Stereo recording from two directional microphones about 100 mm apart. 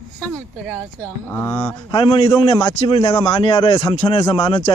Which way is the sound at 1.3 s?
25° left (ahead or behind).